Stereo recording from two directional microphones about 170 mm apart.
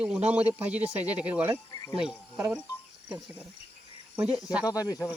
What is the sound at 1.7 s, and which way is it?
Cricket, 20° left (ahead or behind).